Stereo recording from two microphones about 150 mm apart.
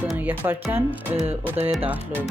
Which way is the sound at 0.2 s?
15° right (ahead or behind).